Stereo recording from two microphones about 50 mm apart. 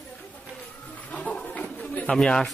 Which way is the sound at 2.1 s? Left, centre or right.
Centre.